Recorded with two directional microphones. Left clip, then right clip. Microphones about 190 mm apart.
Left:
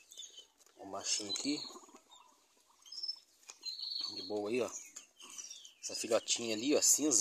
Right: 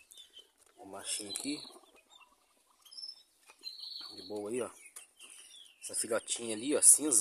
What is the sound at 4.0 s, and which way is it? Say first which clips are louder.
Cricket: left 2 dB; 5° left (ahead or behind).